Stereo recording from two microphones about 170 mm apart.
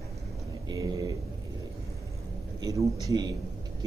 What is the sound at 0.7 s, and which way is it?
Speech, 20° right (ahead or behind).